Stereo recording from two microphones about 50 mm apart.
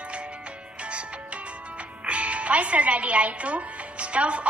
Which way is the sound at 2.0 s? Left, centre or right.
Right.